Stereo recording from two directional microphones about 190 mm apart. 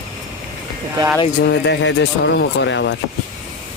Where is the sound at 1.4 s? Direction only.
65° left (ahead or behind).